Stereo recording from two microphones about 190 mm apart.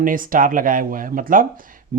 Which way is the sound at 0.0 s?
45° right (ahead or behind).